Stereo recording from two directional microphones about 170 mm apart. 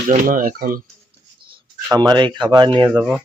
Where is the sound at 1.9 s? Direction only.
25° right (ahead or behind).